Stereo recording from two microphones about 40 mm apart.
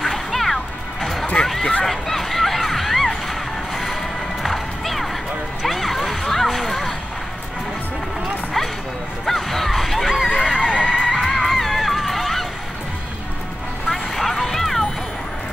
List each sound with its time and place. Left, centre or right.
0.0 s music: centre
1.4 s a sound: centre
1.9 s music: centre
5.7 s a sound: centre
9.2 s music: centre
10.4 s neigh: centre
10.7 s music: centre
11.1 s music: centre
13.8 s vehicle: centre